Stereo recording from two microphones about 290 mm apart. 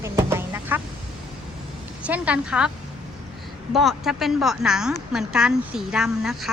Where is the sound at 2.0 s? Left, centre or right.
Centre.